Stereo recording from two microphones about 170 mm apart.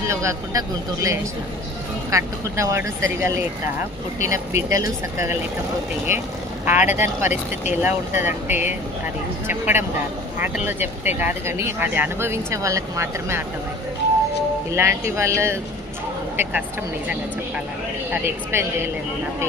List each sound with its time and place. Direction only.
0.1 s speech: 15° right (ahead or behind)
14.7 s speech: 15° right (ahead or behind)
18.1 s speech: 15° right (ahead or behind)